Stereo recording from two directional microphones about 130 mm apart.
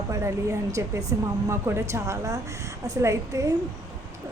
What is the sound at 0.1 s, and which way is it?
A woman's voice, 20° right (ahead or behind).